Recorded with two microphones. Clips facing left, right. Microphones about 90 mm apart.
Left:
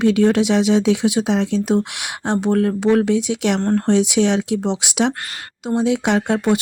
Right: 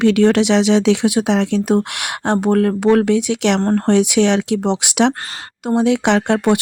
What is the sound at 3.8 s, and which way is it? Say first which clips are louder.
Speech: right 3 dB; 60° right (ahead or behind).